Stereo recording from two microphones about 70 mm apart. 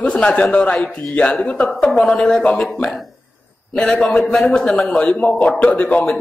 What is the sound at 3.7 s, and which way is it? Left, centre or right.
A man's voice, centre.